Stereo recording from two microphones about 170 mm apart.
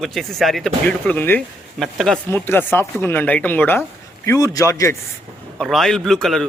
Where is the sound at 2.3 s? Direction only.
15° left (ahead or behind).